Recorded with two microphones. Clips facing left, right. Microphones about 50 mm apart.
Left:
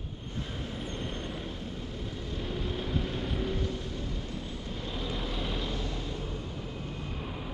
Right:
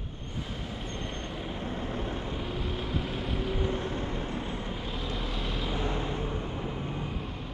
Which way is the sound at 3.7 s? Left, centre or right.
Right.